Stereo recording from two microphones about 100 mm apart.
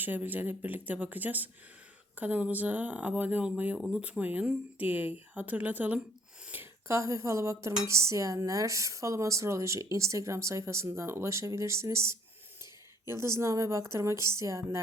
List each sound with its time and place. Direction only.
0.0 s speech: 20° right (ahead or behind)